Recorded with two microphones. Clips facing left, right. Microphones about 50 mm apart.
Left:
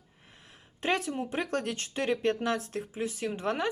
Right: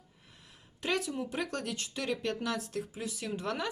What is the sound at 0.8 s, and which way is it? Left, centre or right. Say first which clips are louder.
Speech: left 3 dB; left.